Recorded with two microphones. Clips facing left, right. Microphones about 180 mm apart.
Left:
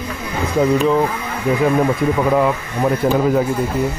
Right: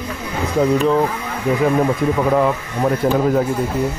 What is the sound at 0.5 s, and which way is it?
Speech, 5° left (ahead or behind).